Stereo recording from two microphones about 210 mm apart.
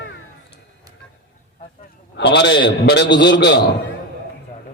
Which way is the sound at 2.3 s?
55° left (ahead or behind).